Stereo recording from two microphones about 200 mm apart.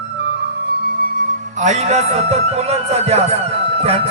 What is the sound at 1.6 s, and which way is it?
Music, 35° right (ahead or behind).